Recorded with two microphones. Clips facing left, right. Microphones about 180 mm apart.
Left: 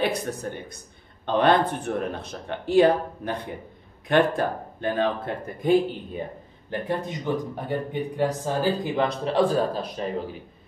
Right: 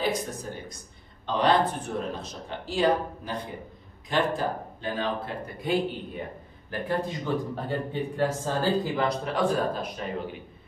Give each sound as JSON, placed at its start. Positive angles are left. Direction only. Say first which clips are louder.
{"t": 0.0, "sound": "speech", "louder": "left 3 dB", "side_deg": 65}
{"t": 6.7, "sound": "a man's voice", "louder": "left 1 dB", "side_deg": 20}